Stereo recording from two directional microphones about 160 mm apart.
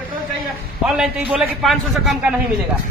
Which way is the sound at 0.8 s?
5° right (ahead or behind).